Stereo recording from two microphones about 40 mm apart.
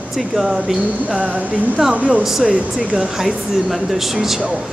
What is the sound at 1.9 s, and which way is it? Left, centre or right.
Speech, right.